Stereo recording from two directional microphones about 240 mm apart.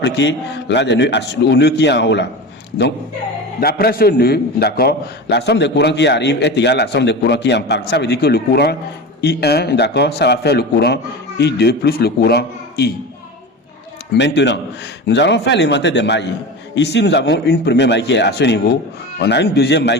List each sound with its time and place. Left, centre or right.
0.0 s a man's voice: left
3.6 s a man's voice: left
14.1 s a man's voice: left